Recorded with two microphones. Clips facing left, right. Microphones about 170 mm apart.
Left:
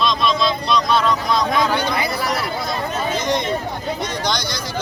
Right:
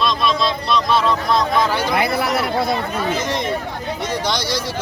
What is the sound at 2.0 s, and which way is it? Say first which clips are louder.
Speech: right 3 dB; 60° right (ahead or behind).